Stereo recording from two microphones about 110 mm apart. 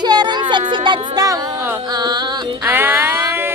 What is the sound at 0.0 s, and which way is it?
Music, 40° right (ahead or behind).